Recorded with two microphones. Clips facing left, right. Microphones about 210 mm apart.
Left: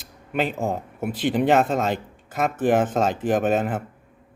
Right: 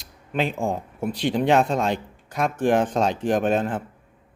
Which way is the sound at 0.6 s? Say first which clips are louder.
Even; 5° left (ahead or behind).